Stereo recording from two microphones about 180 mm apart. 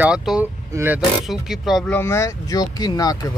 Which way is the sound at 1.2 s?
Centre (ahead or behind).